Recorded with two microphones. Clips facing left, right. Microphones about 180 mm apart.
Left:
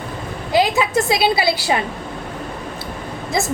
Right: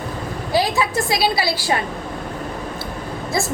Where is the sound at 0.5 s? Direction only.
20° left (ahead or behind).